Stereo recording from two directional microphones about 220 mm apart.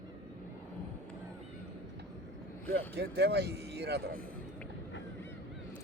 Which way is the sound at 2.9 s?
45° right (ahead or behind).